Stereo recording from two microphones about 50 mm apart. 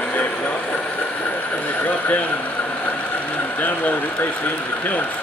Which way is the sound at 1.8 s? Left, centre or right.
Left.